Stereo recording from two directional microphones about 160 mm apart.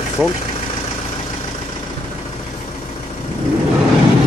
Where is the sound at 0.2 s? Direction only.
10° right (ahead or behind).